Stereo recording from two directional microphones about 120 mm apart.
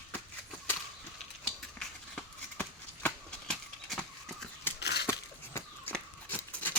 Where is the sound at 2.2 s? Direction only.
10° left (ahead or behind).